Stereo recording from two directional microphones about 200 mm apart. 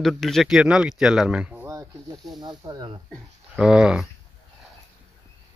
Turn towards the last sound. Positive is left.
turn(degrees=-5)  # may be behind; listen again after turning